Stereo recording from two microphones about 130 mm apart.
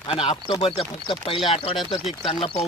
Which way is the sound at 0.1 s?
45° left (ahead or behind).